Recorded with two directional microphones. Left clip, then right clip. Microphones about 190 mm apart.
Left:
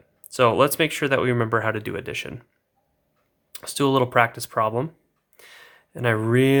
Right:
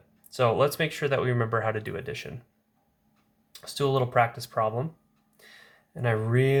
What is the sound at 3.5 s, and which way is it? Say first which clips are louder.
Speech: left 5 dB; 50° left (ahead or behind).